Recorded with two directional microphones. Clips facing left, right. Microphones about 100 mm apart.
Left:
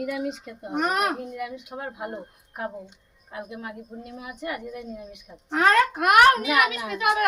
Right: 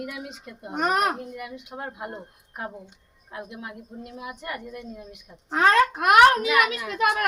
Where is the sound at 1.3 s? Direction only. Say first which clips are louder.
Left 3 dB; centre (ahead or behind).